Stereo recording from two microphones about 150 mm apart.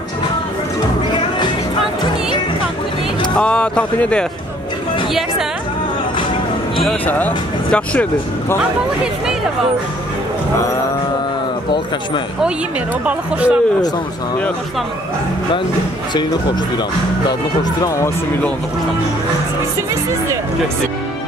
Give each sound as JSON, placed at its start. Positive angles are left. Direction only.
{"t": 3.3, "sound": "speech", "side_deg": 5}
{"t": 6.8, "sound": "speech", "side_deg": 5}
{"t": 13.0, "sound": "speech", "side_deg": -10}
{"t": 17.3, "sound": "speech", "side_deg": 25}